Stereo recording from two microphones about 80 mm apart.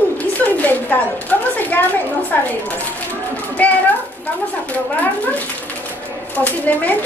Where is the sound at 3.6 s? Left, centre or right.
Left.